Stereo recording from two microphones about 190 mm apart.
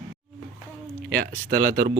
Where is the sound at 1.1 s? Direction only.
50° right (ahead or behind).